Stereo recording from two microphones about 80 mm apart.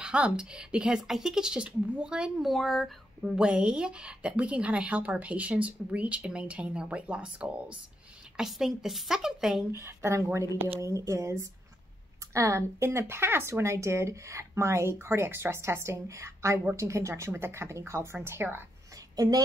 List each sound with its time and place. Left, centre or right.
0.0 s a woman's voice: centre
9.7 s speech: right